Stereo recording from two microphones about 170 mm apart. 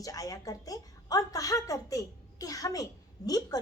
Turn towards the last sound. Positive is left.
turn(degrees=20)  # may be behind; listen again after turning